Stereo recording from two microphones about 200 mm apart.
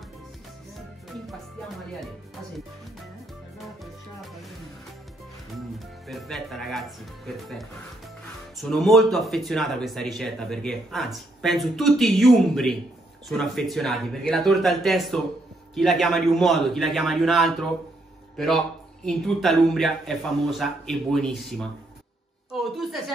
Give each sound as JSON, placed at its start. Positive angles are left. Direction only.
{"t": 2.0, "sound": "speech", "side_deg": 0}
{"t": 3.5, "sound": "music", "side_deg": 0}
{"t": 6.0, "sound": "speech", "side_deg": 0}
{"t": 8.5, "sound": "a woman's voice", "side_deg": 0}